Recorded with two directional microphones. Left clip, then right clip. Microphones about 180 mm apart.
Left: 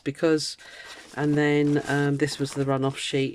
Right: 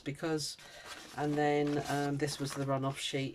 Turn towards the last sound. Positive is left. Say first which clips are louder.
# left 10 dB
turn(degrees=55)  # may be behind; listen again after turning